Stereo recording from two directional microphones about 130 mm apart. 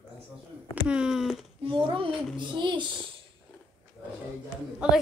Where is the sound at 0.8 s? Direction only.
5° right (ahead or behind).